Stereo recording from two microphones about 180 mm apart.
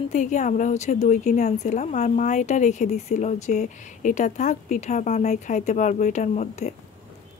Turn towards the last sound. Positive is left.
turn(degrees=40)  # may be behind; listen again after turning